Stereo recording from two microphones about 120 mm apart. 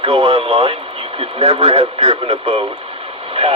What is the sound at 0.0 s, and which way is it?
Speech, 55° right (ahead or behind).